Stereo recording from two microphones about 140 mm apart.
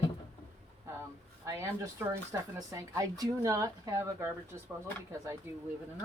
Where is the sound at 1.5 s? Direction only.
20° right (ahead or behind).